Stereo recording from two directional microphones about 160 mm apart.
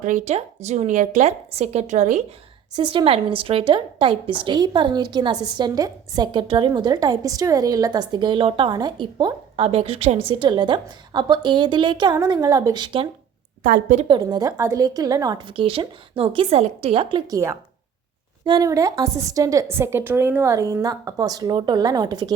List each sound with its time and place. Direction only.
0.0 s a woman's voice: 50° right (ahead or behind)
2.7 s a woman's voice: 30° right (ahead or behind)
13.6 s a woman's voice: 60° right (ahead or behind)
14.1 s a woman's voice: 25° right (ahead or behind)
17.3 s a woman's voice: 15° right (ahead or behind)